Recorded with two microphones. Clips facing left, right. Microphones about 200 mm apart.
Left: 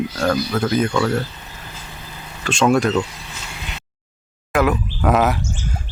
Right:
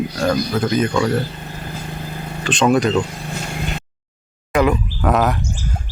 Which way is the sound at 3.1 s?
50° right (ahead or behind).